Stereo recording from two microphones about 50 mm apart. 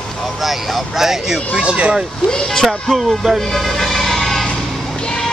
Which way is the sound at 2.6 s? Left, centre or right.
Centre.